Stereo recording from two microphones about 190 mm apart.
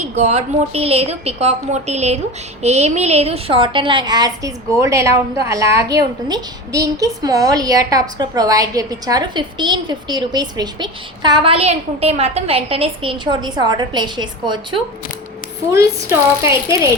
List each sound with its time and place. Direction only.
0.1 s a woman's voice: 35° right (ahead or behind); by 16.9 s 15° right (ahead or behind)